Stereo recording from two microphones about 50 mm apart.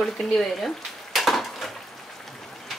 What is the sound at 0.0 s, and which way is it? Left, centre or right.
Frying, centre.